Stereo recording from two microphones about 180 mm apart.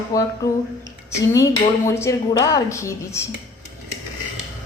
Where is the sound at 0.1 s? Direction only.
20° left (ahead or behind).